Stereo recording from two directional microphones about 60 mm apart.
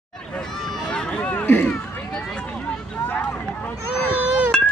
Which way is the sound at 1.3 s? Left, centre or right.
Left.